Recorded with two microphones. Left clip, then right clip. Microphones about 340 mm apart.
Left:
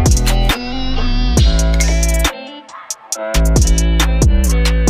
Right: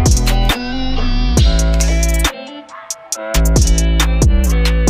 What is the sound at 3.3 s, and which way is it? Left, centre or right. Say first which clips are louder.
Music: right 1 dB; centre.